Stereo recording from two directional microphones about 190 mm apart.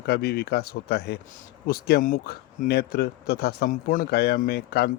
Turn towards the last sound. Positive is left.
turn(degrees=55)  # may be behind; listen again after turning